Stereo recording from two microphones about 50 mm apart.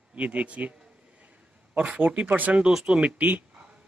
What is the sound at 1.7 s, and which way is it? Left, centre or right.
Speech, right.